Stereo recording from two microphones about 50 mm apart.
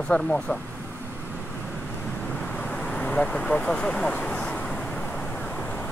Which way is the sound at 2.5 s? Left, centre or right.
Left.